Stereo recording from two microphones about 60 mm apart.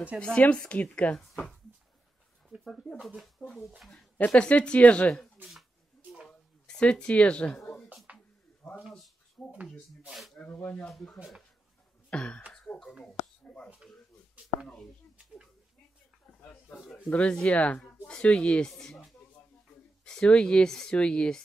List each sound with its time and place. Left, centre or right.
0.4 s speech: left
2.6 s speech: centre; by 5.1 s left
6.7 s speech: centre
8.1 s a sound: right
8.6 s a sound: centre
10.4 s speech: left
10.8 s speech: centre
12.1 s speech: centre
12.7 s a sound: centre
16.3 s a sound: left
17.1 s speech: centre
20.1 s speech: centre